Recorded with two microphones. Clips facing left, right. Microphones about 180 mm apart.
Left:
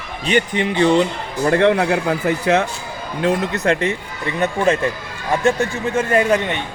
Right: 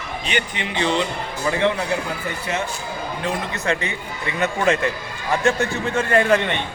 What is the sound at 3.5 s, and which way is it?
Speech, 55° left (ahead or behind).